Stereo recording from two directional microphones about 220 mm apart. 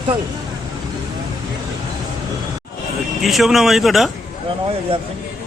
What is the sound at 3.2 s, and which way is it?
Speech, centre (ahead or behind).